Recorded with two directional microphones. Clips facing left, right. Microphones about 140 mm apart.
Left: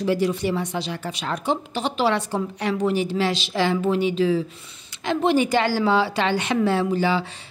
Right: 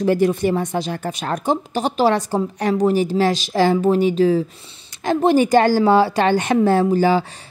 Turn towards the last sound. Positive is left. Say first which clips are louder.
# right 6 dB
turn(degrees=-45)  # may be behind; listen again after turning